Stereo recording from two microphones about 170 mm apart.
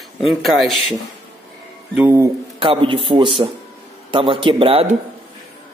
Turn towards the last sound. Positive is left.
turn(degrees=-35)  # may be behind; listen again after turning